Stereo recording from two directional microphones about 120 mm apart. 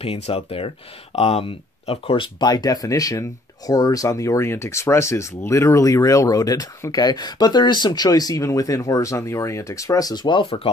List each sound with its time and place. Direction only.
0.0 s speech: 50° left (ahead or behind)
2.4 s speech: 30° left (ahead or behind); by 10.7 s 50° left (ahead or behind)